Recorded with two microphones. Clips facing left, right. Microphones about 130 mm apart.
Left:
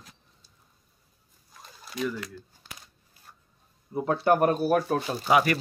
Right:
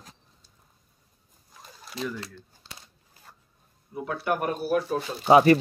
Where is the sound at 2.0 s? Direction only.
30° right (ahead or behind).